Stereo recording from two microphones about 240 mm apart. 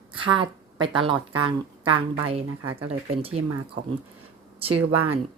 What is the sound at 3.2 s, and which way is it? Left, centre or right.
Speech, right.